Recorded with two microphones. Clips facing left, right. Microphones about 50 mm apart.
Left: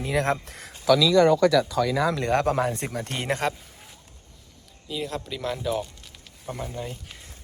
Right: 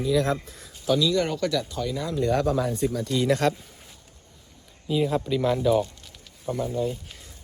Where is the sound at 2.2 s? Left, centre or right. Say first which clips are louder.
Left 1 dB; left.